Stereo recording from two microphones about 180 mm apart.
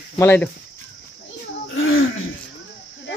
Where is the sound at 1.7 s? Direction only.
90° left.